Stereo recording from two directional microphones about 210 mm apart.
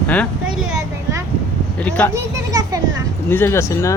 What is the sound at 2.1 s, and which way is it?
Children playing, 15° right (ahead or behind).